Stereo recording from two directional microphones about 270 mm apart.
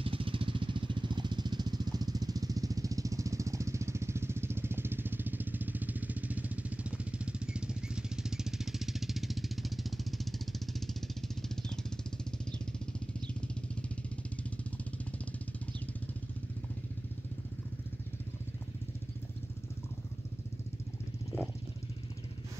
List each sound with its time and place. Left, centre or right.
0.0 s vehicle: centre
21.3 s vehicle: centre